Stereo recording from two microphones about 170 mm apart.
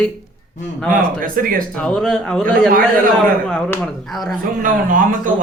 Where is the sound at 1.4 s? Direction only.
55° right (ahead or behind).